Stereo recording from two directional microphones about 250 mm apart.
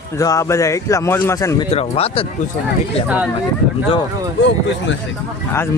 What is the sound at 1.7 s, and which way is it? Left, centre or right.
Speech, left.